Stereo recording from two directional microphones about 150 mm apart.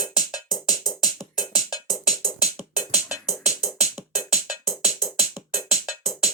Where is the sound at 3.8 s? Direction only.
5° right (ahead or behind).